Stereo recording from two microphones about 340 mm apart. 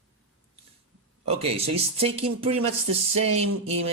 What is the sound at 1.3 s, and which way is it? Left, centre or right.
Speech, centre.